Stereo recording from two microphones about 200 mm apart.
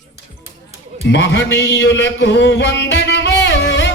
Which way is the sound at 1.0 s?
60° left (ahead or behind).